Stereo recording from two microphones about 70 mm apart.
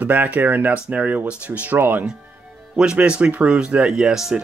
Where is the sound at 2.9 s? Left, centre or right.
Centre.